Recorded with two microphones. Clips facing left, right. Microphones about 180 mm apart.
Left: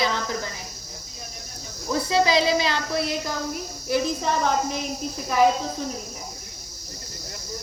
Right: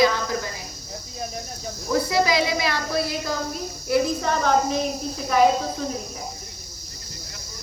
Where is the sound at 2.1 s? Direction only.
30° left (ahead or behind).